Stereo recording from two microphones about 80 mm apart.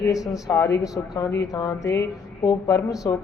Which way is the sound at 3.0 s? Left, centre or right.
Left.